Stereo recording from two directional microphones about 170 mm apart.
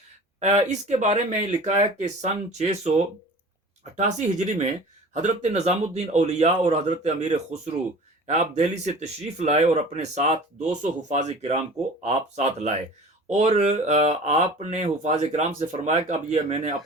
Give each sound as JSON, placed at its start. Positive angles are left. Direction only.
{"t": 0.3, "sound": "speech", "side_deg": -40}
{"t": 3.9, "sound": "speech", "side_deg": -40}